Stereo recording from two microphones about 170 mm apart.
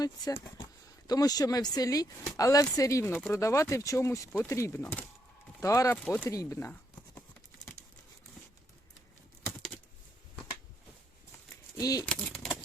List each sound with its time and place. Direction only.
0.0 s speech: 20° left (ahead or behind)
11.8 s speech: 20° left (ahead or behind)
12.0 s a sound: 5° left (ahead or behind)